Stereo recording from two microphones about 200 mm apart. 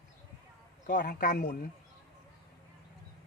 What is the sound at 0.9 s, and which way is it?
Speech, 40° left (ahead or behind).